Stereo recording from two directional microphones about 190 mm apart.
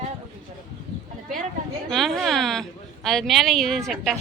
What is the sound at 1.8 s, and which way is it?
Speech, centre (ahead or behind).